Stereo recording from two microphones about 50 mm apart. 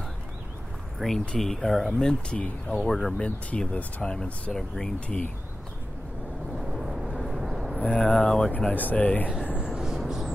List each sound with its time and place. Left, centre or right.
0.9 s speech: centre
2.0 s speech: centre
2.9 s speech: centre
3.2 s speech: left
4.0 s speech: centre
6.6 s vehicle: centre
7.8 s speech: left
9.7 s a sound: centre